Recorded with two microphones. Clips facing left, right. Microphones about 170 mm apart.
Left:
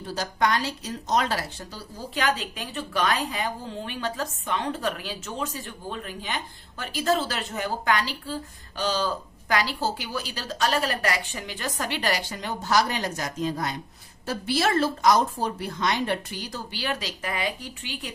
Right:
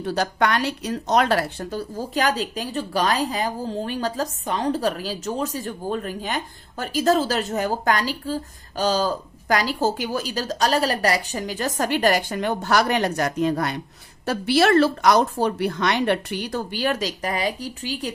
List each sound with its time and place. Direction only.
0.0 s a woman's voice: 65° right (ahead or behind); by 18.1 s 40° right (ahead or behind)